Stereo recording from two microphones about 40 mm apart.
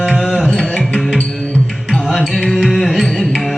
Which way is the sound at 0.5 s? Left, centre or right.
Left.